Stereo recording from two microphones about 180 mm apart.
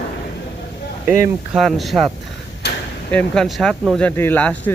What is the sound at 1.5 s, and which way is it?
Speech, centre (ahead or behind).